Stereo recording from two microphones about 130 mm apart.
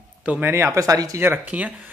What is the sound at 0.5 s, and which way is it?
Speech, 25° right (ahead or behind).